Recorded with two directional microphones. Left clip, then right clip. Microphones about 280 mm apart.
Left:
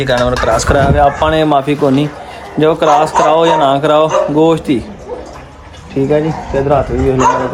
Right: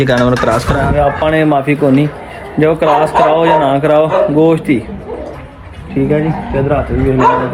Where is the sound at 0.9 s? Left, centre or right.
Centre.